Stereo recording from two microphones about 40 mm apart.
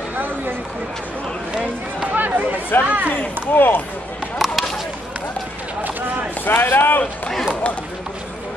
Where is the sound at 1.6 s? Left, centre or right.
Right.